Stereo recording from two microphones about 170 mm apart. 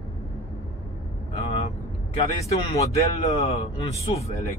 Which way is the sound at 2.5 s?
40° left (ahead or behind).